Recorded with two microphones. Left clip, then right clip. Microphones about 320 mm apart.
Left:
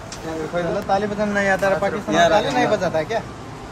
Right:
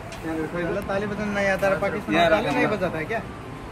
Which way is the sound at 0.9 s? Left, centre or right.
Left.